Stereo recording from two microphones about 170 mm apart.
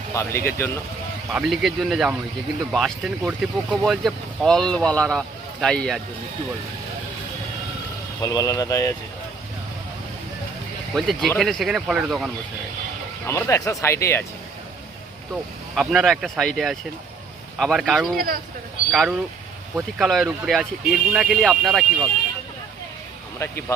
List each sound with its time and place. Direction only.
0.1 s speech: 15° left (ahead or behind)
1.3 s speech: centre (ahead or behind)
8.2 s speech: 20° left (ahead or behind)
10.9 s speech: centre (ahead or behind)
13.2 s speech: 15° left (ahead or behind)
15.7 s speech: centre (ahead or behind)
23.4 s speech: 15° left (ahead or behind)